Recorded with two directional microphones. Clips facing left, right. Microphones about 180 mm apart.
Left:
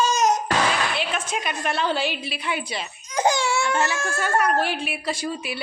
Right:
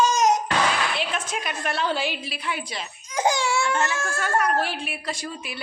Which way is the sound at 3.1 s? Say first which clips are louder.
Left 2 dB; 10° right (ahead or behind).